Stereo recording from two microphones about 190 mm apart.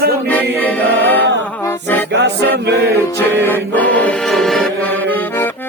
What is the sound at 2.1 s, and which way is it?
Music, 65° right (ahead or behind).